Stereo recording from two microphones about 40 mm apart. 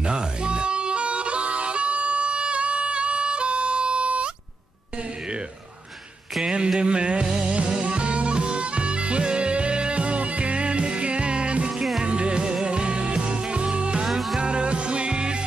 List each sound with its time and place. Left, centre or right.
0.0 s music: right
6.4 s music: right
11.7 s music: centre
12.0 s music: right
14.0 s music: centre
14.4 s music: right